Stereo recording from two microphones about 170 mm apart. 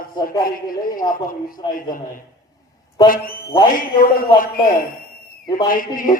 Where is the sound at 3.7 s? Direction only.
55° left (ahead or behind).